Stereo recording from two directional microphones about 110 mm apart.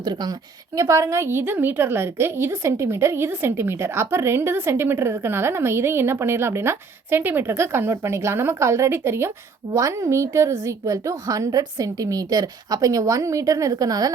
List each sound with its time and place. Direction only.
0.0 s a woman's voice: 40° right (ahead or behind)
0.8 s a woman's voice: 30° right (ahead or behind)